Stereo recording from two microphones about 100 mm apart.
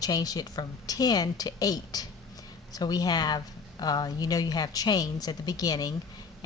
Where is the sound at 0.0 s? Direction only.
40° left (ahead or behind).